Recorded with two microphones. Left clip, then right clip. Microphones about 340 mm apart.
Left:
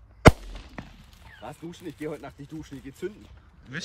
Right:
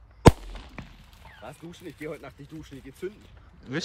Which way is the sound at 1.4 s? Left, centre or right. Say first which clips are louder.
Left 3 dB; left.